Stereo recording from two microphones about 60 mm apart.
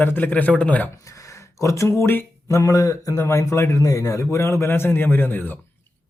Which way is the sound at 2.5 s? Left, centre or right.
Left.